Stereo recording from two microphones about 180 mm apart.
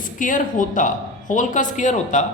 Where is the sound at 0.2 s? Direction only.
45° left (ahead or behind).